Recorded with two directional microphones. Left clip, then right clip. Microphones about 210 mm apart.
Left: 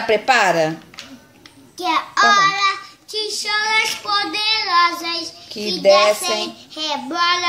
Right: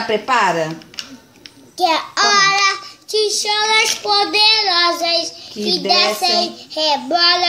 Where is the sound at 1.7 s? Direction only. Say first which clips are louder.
Right 2 dB; centre (ahead or behind).